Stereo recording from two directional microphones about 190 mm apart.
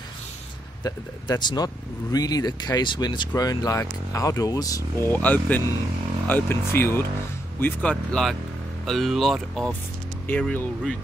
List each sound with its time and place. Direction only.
0.8 s speech: 20° left (ahead or behind); by 11.0 s 5° left (ahead or behind)